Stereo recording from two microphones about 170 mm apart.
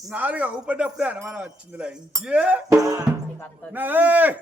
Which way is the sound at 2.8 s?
20° right (ahead or behind).